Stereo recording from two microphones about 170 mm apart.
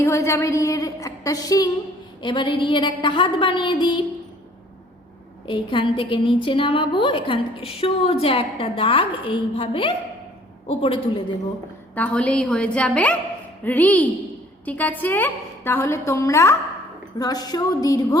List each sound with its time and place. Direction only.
0.0 s a woman's voice: 15° left (ahead or behind)
5.5 s a woman's voice: 30° left (ahead or behind)
11.9 s a woman's voice: 5° left (ahead or behind)